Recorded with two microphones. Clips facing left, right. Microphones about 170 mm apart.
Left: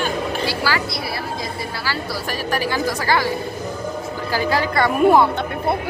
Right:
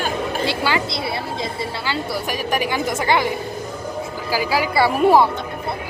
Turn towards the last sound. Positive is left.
turn(degrees=-5)  # may be behind; listen again after turning